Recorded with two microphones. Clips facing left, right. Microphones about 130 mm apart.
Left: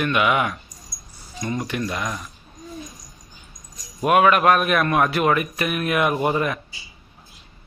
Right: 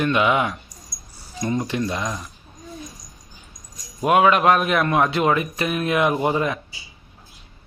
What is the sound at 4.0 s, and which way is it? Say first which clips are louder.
Speech: even; 20° right (ahead or behind).